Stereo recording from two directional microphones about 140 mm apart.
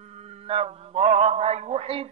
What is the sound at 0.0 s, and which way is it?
A man's voice, 50° right (ahead or behind).